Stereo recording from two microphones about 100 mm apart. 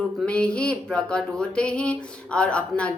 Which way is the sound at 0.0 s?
10° left (ahead or behind).